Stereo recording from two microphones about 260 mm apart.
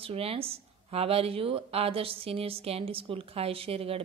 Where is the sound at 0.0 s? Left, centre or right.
Right.